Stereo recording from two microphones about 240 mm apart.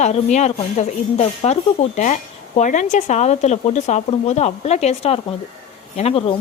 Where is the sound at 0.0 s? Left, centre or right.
Left.